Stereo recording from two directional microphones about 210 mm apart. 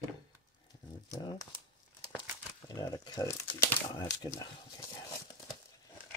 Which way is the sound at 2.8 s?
15° left (ahead or behind).